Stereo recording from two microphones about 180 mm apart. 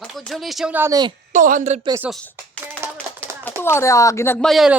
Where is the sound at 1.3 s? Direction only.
45° right (ahead or behind).